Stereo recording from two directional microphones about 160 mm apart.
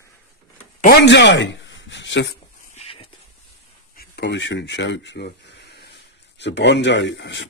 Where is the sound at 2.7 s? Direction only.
35° left (ahead or behind).